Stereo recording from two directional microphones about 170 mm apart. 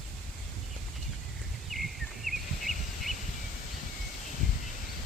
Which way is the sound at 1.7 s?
Centre (ahead or behind).